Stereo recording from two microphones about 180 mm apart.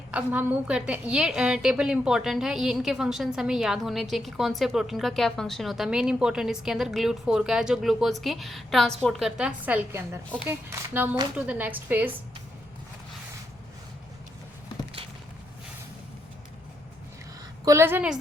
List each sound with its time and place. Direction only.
0.1 s a woman's voice: 10° right (ahead or behind)
17.7 s a woman's voice: 15° right (ahead or behind)